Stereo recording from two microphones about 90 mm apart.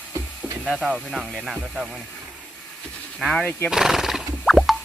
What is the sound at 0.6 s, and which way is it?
Speech, centre (ahead or behind).